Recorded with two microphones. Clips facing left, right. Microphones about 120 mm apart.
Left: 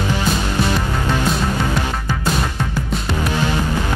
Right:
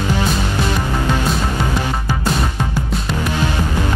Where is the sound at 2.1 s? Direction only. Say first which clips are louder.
Right 1 dB; 10° right (ahead or behind).